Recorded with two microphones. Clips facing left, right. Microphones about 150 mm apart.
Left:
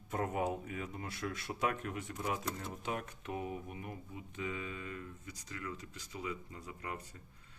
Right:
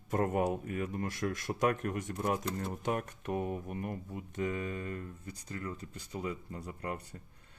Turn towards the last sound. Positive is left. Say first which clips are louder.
# right 5 dB
turn(degrees=-45)  # may be behind; listen again after turning